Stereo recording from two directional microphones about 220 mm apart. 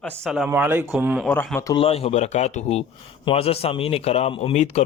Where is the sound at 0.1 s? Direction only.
5° right (ahead or behind).